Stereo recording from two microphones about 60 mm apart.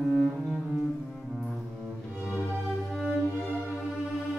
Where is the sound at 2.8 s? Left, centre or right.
Centre.